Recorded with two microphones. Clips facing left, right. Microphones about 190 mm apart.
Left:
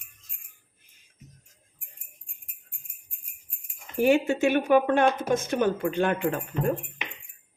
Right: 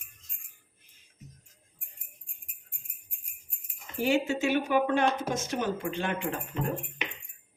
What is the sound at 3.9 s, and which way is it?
Speech, 55° left (ahead or behind).